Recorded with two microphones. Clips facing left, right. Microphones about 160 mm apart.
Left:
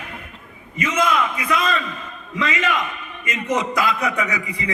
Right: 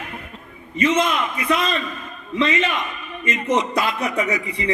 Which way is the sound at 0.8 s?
30° right (ahead or behind).